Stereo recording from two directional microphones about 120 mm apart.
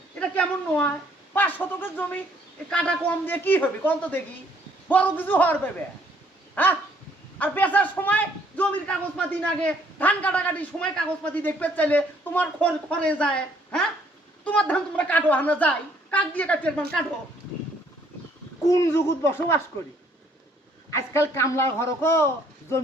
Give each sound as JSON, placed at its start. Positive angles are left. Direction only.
{"t": 0.2, "sound": "a sound", "side_deg": 10}
{"t": 1.3, "sound": "a man's voice", "side_deg": 15}
{"t": 6.5, "sound": "dog", "side_deg": 15}
{"t": 7.3, "sound": "a man's voice", "side_deg": 15}
{"t": 18.7, "sound": "a man's voice", "side_deg": 25}
{"t": 20.9, "sound": "a man's voice", "side_deg": 25}